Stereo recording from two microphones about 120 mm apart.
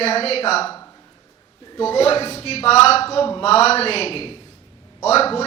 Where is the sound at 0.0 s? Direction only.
60° left (ahead or behind).